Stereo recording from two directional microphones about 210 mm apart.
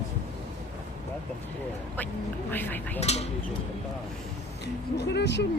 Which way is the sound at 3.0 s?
30° left (ahead or behind).